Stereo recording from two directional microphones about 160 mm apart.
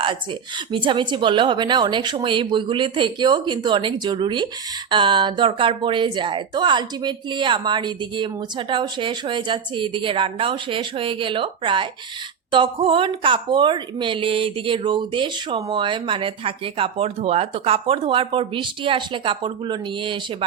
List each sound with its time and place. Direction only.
0.7 s speech: 30° right (ahead or behind)